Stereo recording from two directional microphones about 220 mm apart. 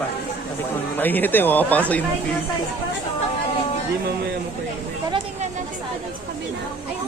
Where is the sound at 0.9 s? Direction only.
10° left (ahead or behind).